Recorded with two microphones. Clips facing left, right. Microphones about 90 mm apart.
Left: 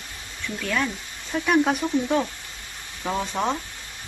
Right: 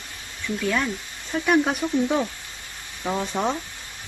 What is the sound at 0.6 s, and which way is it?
Speech, 5° right (ahead or behind).